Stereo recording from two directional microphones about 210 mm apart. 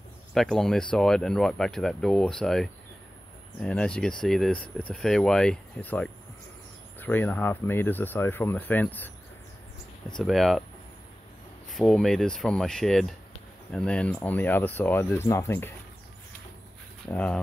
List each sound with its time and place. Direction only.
0.3 s speech: centre (ahead or behind)
11.7 s speech: centre (ahead or behind)
17.1 s speech: 5° left (ahead or behind)